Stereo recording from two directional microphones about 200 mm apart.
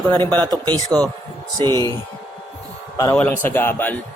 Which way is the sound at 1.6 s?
20° right (ahead or behind).